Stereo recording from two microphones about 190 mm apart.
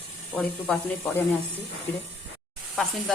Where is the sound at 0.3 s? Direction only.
5° left (ahead or behind).